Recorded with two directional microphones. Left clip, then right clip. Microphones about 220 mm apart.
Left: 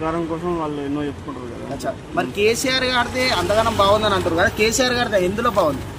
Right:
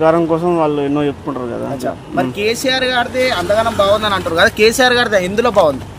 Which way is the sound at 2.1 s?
20° right (ahead or behind).